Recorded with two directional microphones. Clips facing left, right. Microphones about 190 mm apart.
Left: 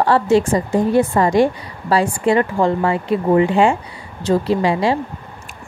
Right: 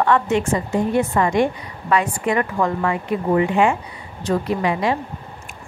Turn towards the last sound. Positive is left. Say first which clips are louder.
# left 4 dB
turn(degrees=30)  # may be behind; listen again after turning